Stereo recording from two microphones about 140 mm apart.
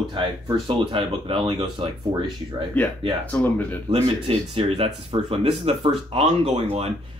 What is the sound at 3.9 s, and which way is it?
Speech, 45° right (ahead or behind).